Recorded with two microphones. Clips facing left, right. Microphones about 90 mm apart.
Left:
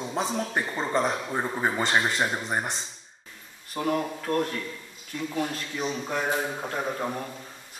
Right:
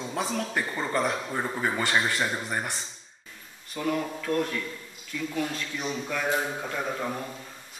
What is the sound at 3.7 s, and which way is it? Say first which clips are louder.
A man's voice: left 2 dB; 40° left (ahead or behind).